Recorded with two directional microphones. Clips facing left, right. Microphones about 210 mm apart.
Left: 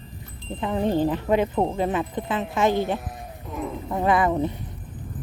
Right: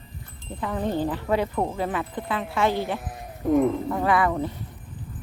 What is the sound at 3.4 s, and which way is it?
Speech, 50° right (ahead or behind).